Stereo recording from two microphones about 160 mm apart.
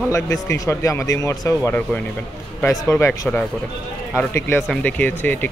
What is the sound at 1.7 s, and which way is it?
Speech, 10° left (ahead or behind).